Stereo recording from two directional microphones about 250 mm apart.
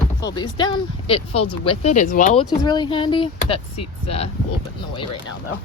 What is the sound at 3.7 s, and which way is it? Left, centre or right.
Speech, left.